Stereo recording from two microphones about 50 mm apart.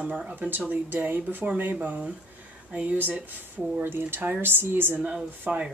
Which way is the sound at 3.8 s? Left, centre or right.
Right.